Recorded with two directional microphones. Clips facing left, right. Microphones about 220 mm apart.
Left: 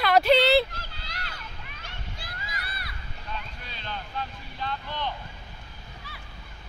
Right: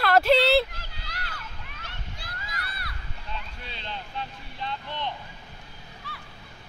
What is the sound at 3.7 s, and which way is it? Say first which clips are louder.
Vehicle: even; 25° right (ahead or behind).